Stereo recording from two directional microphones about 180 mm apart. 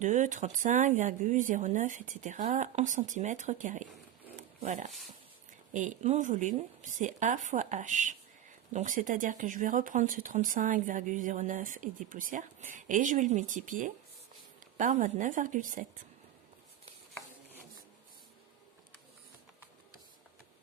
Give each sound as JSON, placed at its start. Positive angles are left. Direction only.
{"t": 0.0, "sound": "speech", "side_deg": -45}
{"t": 4.4, "sound": "a sound", "side_deg": -40}
{"t": 4.9, "sound": "speech", "side_deg": 0}
{"t": 5.5, "sound": "speech", "side_deg": -45}